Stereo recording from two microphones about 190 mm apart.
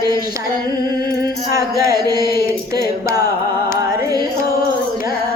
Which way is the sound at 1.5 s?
20° right (ahead or behind).